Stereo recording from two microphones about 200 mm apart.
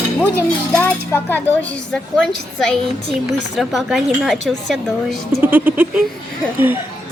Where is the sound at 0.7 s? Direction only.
10° left (ahead or behind); by 6.0 s 10° right (ahead or behind).